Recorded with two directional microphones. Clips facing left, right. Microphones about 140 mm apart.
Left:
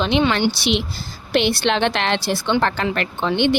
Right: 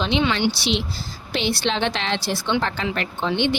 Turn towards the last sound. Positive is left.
turn(degrees=55)  # may be behind; listen again after turning